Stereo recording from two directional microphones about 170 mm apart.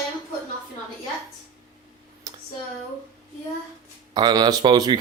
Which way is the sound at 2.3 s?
25° right (ahead or behind).